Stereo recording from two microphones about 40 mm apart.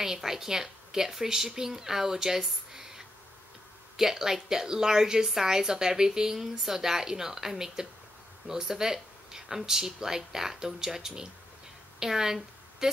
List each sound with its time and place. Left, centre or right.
0.0 s a woman's voice: centre
3.9 s a woman's voice: centre